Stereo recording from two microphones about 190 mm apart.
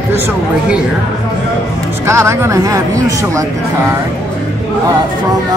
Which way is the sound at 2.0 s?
15° right (ahead or behind).